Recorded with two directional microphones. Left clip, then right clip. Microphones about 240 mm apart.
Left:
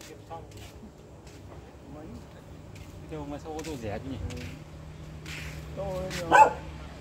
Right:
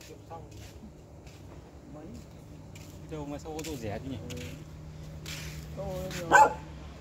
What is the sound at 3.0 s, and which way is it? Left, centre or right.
Speech, right.